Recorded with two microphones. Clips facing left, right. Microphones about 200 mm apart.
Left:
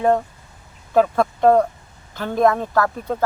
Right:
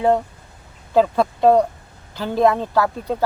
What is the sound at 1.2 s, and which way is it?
Speech, 10° right (ahead or behind).